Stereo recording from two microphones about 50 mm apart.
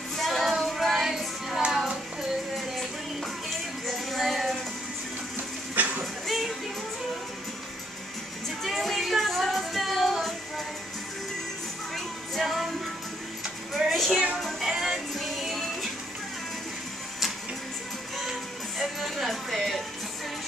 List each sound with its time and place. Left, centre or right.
0.2 s music: centre
1.7 s child singing: centre
2.5 s music: centre
5.8 s music: right
6.2 s music: centre
8.6 s child singing: centre
11.9 s music: centre
13.7 s music: centre
14.1 s music: right
14.6 s music: centre
18.8 s music: centre